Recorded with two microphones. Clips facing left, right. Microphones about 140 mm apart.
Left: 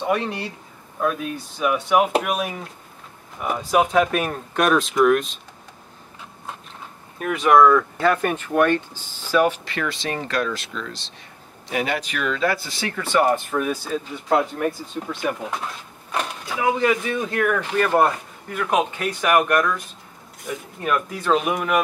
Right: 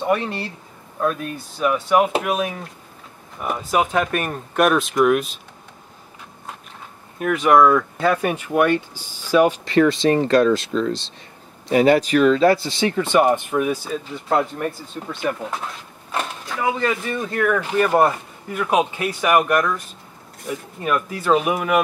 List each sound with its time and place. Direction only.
0.0 s speech: centre (ahead or behind)
7.2 s speech: centre (ahead or behind); by 9.6 s 15° right (ahead or behind)
9.7 s speech: 30° right (ahead or behind); by 13.9 s 10° right (ahead or behind)
13.9 s speech: centre (ahead or behind)